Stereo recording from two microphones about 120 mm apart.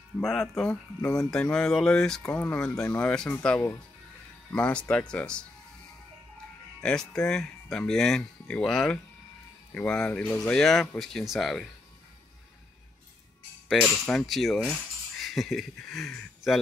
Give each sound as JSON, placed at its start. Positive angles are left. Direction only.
{"t": 0.2, "sound": "speech", "side_deg": 5}
{"t": 6.8, "sound": "speech", "side_deg": 5}
{"t": 13.8, "sound": "speech", "side_deg": 5}